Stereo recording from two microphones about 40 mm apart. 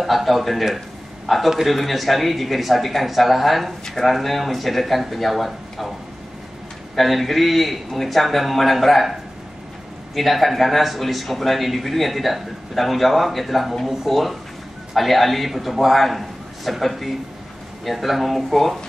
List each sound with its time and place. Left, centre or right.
0.0 s a man's voice: centre
7.0 s a man's voice: centre
10.1 s a man's voice: centre